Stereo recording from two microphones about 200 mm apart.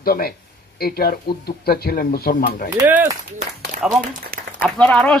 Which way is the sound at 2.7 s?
10° right (ahead or behind).